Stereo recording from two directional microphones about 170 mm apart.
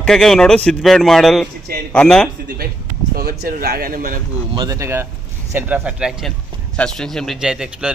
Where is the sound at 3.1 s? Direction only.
65° right (ahead or behind).